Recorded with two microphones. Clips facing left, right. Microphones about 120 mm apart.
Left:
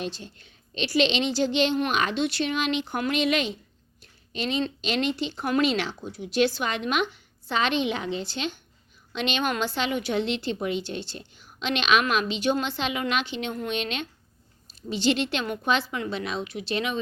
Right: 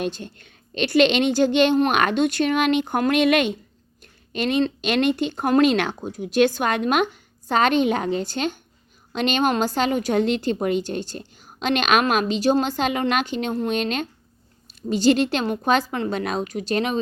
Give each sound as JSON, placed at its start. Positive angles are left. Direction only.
{"t": 0.0, "sound": "a woman's voice", "side_deg": -55}
{"t": 4.0, "sound": "a sound", "side_deg": -55}
{"t": 4.8, "sound": "a woman's voice", "side_deg": -60}